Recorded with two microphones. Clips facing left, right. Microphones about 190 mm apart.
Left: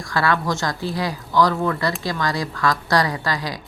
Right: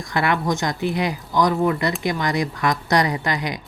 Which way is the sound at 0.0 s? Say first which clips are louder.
Even; 20° right (ahead or behind).